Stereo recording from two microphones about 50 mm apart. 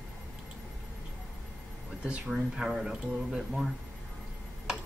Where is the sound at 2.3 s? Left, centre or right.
Centre.